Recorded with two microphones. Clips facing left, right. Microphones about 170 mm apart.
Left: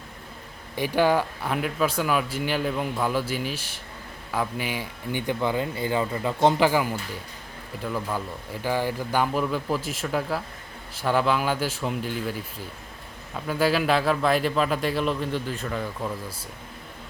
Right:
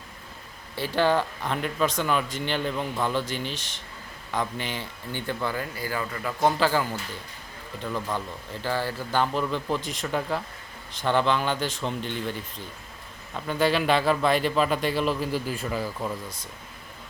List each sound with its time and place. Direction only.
0.8 s a man's voice: 10° left (ahead or behind); by 16.1 s 5° right (ahead or behind)